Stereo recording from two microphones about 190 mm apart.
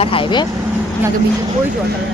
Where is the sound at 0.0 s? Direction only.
30° left (ahead or behind).